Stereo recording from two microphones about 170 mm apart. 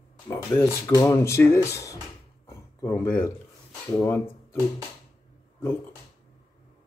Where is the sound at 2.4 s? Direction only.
15° left (ahead or behind).